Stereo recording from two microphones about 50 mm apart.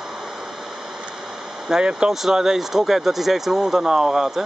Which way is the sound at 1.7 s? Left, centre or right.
Centre.